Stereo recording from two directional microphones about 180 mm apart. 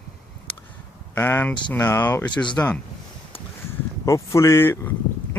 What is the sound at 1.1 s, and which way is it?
Speech, 10° left (ahead or behind).